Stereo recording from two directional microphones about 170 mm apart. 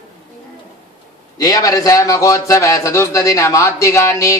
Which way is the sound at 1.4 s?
20° left (ahead or behind).